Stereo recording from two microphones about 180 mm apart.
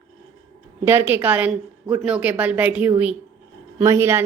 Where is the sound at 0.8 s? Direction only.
10° right (ahead or behind).